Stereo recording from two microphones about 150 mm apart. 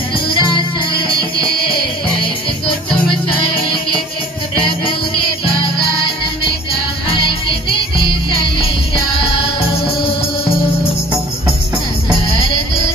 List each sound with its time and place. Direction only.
0.3 s music: 35° left (ahead or behind)
4.6 s music: 35° left (ahead or behind)
7.1 s music: 35° left (ahead or behind)